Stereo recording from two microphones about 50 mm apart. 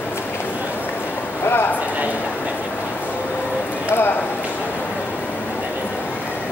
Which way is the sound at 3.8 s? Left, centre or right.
Left.